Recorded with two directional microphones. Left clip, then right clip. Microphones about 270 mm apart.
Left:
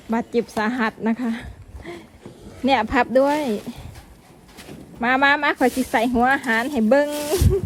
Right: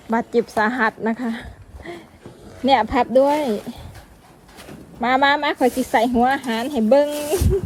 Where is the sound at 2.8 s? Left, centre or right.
Left.